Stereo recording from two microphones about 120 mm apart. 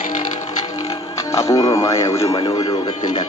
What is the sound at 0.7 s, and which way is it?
Speech, 30° left (ahead or behind).